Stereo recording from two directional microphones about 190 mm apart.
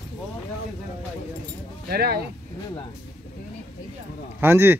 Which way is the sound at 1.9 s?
55° right (ahead or behind).